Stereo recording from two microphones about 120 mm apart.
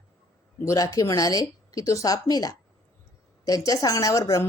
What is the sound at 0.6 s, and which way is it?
A woman's voice, 30° left (ahead or behind).